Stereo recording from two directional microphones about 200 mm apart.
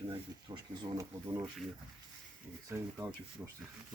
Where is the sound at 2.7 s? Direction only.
10° right (ahead or behind).